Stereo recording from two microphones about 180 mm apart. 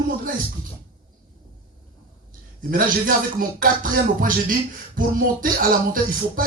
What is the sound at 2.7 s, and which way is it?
Speech, 50° right (ahead or behind).